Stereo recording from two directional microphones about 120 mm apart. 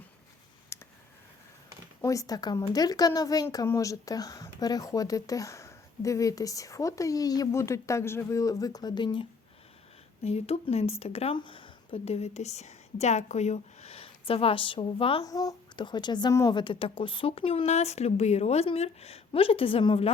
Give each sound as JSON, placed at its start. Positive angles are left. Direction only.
{"t": 0.7, "sound": "clicking", "side_deg": 20}
{"t": 2.0, "sound": "speech", "side_deg": 30}
{"t": 10.2, "sound": "speech", "side_deg": 60}
{"t": 11.3, "sound": "speech", "side_deg": 45}
{"t": 15.2, "sound": "speech", "side_deg": 30}
{"t": 16.3, "sound": "speech", "side_deg": 25}
{"t": 16.6, "sound": "speech", "side_deg": 45}